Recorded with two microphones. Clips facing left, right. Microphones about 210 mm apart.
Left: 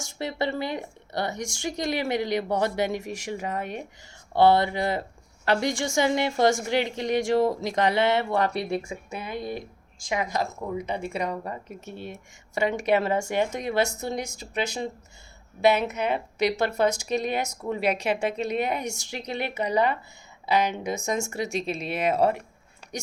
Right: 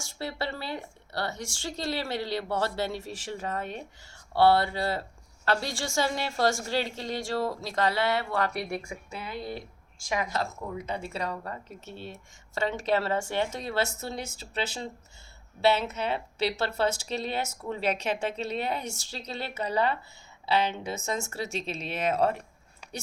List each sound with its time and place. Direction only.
0.0 s a woman's voice: 20° left (ahead or behind)